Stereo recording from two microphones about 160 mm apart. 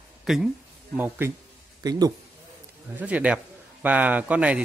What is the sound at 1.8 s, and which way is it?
Speech, 25° right (ahead or behind).